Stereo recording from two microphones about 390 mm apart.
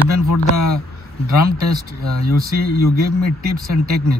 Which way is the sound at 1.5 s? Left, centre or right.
Right.